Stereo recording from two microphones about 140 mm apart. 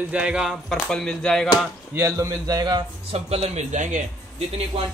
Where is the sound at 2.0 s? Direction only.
20° right (ahead or behind).